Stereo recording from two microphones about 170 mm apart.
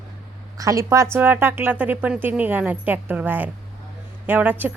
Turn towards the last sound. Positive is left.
turn(degrees=-10)  # may be behind; listen again after turning